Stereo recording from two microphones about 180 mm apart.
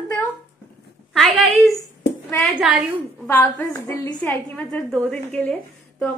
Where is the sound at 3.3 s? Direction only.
10° left (ahead or behind).